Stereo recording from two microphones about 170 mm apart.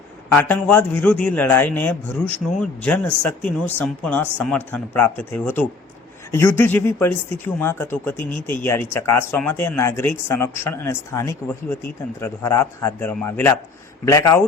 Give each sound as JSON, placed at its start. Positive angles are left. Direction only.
{"t": 0.3, "sound": "speech", "side_deg": 10}